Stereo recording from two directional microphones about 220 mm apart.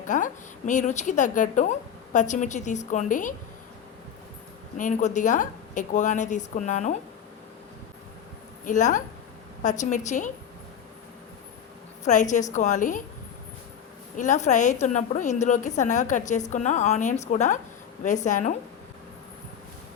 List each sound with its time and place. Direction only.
0.1 s a woman's voice: 35° left (ahead or behind)
4.8 s a woman's voice: 35° left (ahead or behind)
8.6 s a woman's voice: 35° left (ahead or behind)
12.0 s a woman's voice: 35° left (ahead or behind)
14.2 s a woman's voice: 35° left (ahead or behind)